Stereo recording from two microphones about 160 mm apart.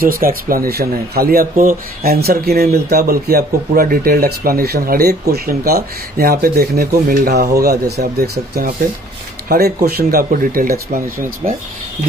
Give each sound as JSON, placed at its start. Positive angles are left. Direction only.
{"t": 0.0, "sound": "speech", "side_deg": -65}
{"t": 9.8, "sound": "speech", "side_deg": -70}